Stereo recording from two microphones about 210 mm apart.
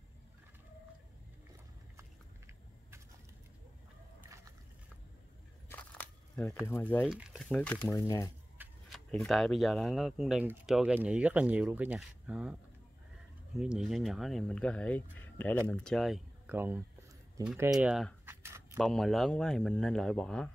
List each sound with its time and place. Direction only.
2.0 s a sound: 10° right (ahead or behind)
5.7 s biting: 5° left (ahead or behind)
6.7 s speech: 10° left (ahead or behind)
8.5 s speech: centre (ahead or behind)
13.6 s speech: centre (ahead or behind)
18.3 s a sound: 10° right (ahead or behind)
18.8 s speech: centre (ahead or behind)